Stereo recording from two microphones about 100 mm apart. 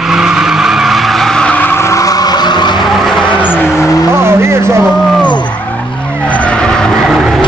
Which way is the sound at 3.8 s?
35° left (ahead or behind).